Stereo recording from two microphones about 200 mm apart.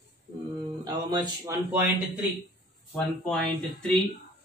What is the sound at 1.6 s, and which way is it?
Speech, 10° right (ahead or behind).